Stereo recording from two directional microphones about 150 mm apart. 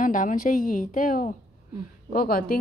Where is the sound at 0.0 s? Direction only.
60° left (ahead or behind).